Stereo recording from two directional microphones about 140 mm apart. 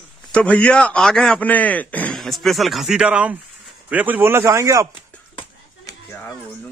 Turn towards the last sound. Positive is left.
turn(degrees=35)  # may be behind; listen again after turning